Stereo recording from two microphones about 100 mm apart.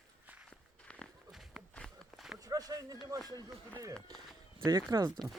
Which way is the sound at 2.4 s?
35° right (ahead or behind).